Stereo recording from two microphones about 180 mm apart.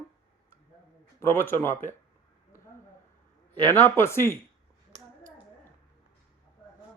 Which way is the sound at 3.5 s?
10° left (ahead or behind).